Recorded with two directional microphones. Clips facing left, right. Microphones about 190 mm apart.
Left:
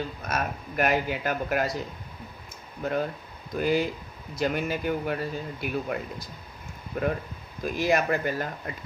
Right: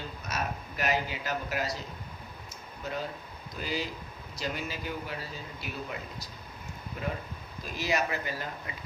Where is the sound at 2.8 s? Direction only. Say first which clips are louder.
Left 8 dB; 55° left (ahead or behind).